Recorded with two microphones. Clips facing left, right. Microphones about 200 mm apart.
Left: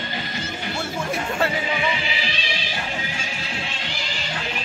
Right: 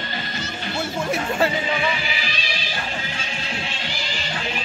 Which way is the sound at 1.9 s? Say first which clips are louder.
Left 1 dB; 25° left (ahead or behind).